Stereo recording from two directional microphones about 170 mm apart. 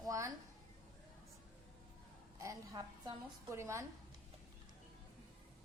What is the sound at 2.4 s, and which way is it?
A woman's voice, 20° right (ahead or behind).